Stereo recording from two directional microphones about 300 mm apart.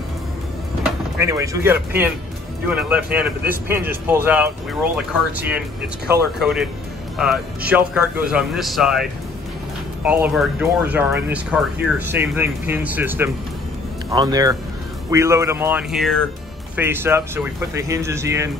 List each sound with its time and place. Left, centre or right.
1.2 s speech: centre
10.0 s speech: centre